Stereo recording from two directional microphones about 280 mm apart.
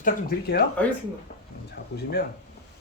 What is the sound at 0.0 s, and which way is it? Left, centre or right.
Speech, left.